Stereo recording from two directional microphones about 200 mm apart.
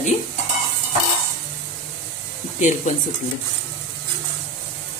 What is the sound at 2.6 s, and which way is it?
Speech, 40° left (ahead or behind).